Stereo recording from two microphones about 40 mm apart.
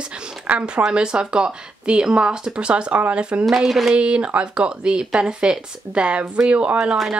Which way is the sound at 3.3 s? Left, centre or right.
Right.